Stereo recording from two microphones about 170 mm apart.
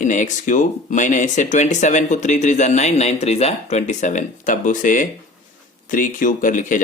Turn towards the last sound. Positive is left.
turn(degrees=50)  # may be behind; listen again after turning